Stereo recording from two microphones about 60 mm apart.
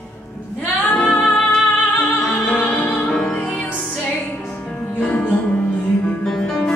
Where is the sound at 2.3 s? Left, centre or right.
Centre.